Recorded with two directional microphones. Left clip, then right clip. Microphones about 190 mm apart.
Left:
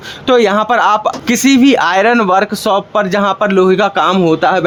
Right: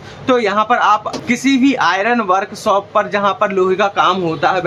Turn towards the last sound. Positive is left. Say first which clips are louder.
# left 5 dB
turn(degrees=50)  # may be behind; listen again after turning